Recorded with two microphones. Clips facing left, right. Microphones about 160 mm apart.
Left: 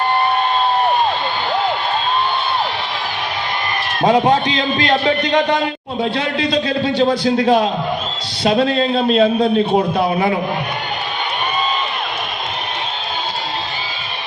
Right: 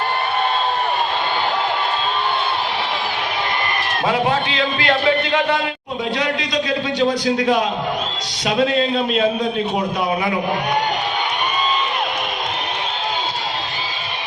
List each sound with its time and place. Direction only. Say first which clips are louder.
4.0 s a man's voice: left 6 dB; 35° left (ahead or behind)